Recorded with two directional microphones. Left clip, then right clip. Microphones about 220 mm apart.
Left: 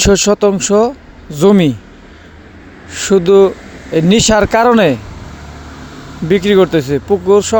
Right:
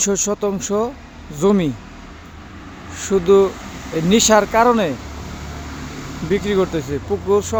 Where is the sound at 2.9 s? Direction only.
35° left (ahead or behind).